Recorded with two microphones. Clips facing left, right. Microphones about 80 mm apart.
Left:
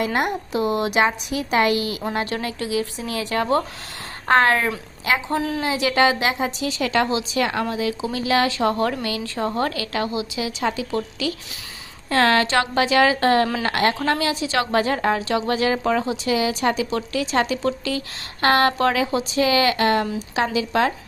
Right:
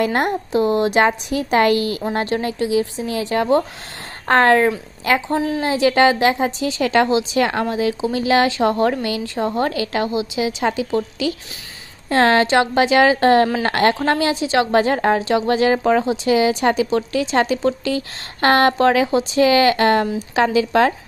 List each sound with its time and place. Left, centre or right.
0.0 s speech: right
2.1 s a woman's voice: right
4.3 s speech: right
5.4 s a woman's voice: centre
5.6 s a woman's voice: right